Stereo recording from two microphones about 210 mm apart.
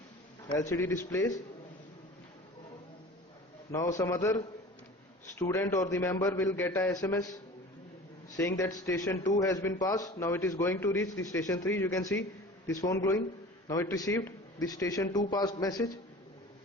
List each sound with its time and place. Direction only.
0.7 s a man's voice: 10° left (ahead or behind)
3.7 s a man's voice: 15° left (ahead or behind)
8.4 s a man's voice: 15° left (ahead or behind)